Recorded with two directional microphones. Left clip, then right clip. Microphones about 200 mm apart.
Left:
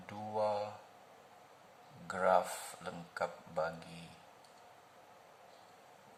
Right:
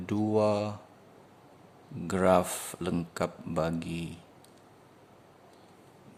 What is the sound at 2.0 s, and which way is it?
Speech, 40° right (ahead or behind).